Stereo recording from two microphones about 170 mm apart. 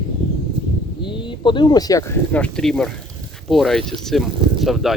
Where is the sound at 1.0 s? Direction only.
30° left (ahead or behind).